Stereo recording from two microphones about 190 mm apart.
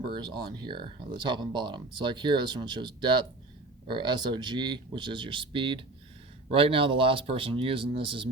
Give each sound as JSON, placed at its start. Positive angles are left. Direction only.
{"t": 0.1, "sound": "speech", "side_deg": -20}